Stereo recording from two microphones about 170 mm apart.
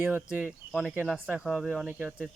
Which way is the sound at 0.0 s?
10° right (ahead or behind).